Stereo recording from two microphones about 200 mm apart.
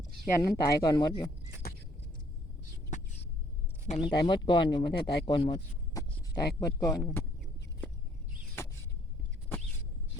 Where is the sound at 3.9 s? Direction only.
30° left (ahead or behind); by 7.2 s 15° left (ahead or behind).